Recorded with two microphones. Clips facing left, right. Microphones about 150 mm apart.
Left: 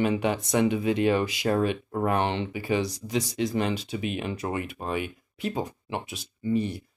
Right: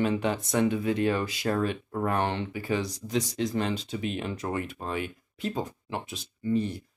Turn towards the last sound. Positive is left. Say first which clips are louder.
# left 1 dB
turn(degrees=10)  # may be behind; listen again after turning